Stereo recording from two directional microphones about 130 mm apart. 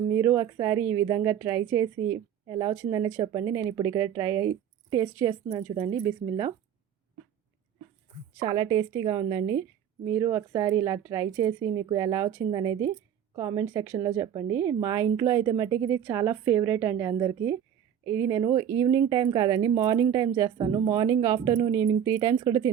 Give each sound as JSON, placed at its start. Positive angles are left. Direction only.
{"t": 0.1, "sound": "speech", "side_deg": -20}
{"t": 5.0, "sound": "a woman's voice", "side_deg": -35}
{"t": 8.4, "sound": "a woman's voice", "side_deg": -30}